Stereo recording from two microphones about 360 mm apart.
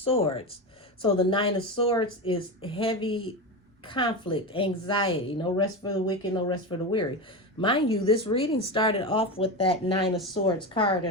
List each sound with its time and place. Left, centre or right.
0.0 s a woman's voice: centre